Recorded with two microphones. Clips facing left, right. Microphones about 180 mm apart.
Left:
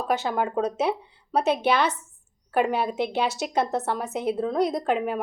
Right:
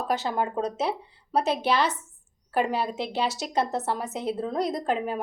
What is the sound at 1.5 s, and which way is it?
Speech, 55° left (ahead or behind).